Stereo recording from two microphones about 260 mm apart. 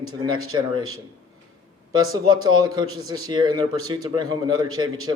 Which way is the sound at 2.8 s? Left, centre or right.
Right.